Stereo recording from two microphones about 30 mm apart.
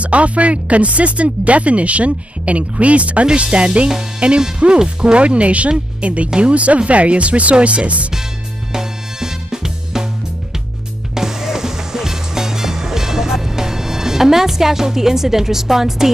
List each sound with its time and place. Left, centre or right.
0.0 s speech: right
3.5 s music: right
4.8 s speech: right
8.7 s music: centre
11.1 s music: centre